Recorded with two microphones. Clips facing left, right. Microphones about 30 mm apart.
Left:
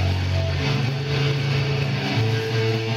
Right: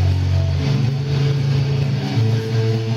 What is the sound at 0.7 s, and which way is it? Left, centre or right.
Vehicle, centre.